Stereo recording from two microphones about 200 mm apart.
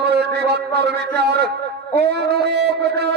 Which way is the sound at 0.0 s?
55° right (ahead or behind).